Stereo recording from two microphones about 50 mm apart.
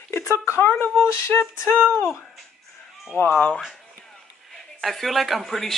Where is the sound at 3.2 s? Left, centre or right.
Left.